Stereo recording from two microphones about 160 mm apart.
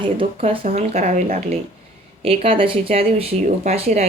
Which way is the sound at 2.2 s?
35° right (ahead or behind).